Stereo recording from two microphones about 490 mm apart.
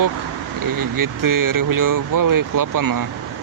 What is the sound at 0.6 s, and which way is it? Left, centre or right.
Speech, right.